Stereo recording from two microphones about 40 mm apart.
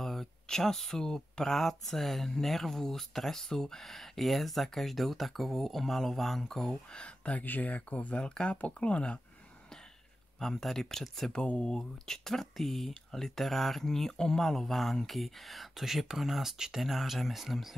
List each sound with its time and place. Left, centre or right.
0.0 s speech: centre
6.9 s speech: left
7.3 s speech: left
8.2 s speech: left
10.4 s speech: centre
11.3 s speech: centre